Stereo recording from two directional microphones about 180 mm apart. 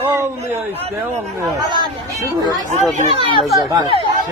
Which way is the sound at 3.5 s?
20° right (ahead or behind).